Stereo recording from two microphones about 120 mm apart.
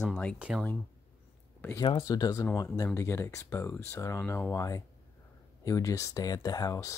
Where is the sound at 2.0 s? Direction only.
30° left (ahead or behind).